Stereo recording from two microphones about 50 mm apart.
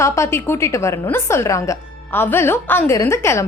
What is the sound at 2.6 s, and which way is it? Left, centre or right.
Speech, left.